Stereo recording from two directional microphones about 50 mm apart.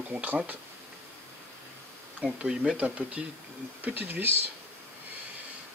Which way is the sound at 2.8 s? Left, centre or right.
Right.